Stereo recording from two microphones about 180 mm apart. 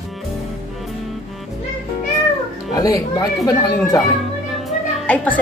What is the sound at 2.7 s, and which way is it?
Speech, 20° left (ahead or behind).